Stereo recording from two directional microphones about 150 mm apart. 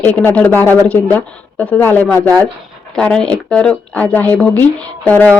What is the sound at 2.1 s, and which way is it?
Speech, 25° right (ahead or behind).